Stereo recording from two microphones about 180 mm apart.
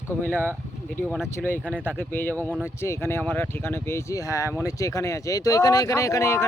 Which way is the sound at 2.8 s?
15° left (ahead or behind).